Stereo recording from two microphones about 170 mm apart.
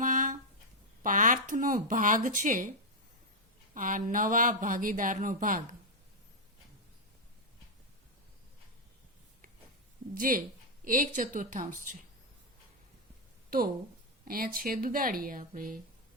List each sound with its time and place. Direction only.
0.0 s a sound: 50° right (ahead or behind)
1.0 s speech: 50° right (ahead or behind)
3.8 s speech: 50° right (ahead or behind)
10.2 s speech: 55° right (ahead or behind)
14.3 s speech: 60° right (ahead or behind)